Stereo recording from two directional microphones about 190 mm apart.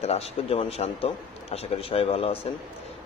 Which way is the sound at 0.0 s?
30° left (ahead or behind).